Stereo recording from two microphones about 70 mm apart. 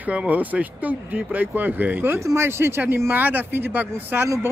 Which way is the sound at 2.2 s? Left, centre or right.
Right.